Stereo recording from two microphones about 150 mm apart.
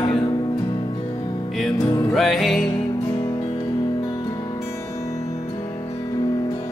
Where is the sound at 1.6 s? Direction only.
Centre (ahead or behind).